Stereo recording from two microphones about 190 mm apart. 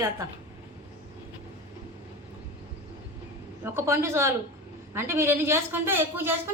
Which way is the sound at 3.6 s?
15° right (ahead or behind).